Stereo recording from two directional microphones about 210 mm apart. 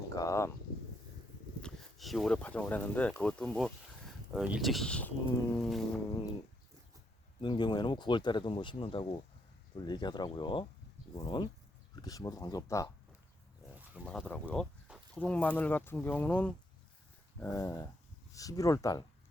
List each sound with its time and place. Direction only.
0.1 s speech: 15° left (ahead or behind)
1.6 s speech: centre (ahead or behind)
5.5 s a sound: centre (ahead or behind)
7.4 s speech: 20° left (ahead or behind)
14.0 s speech: 5° left (ahead or behind)